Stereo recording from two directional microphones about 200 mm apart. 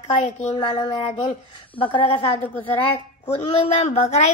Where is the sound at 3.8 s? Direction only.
35° left (ahead or behind).